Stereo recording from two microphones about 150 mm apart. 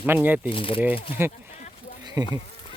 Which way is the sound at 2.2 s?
25° right (ahead or behind).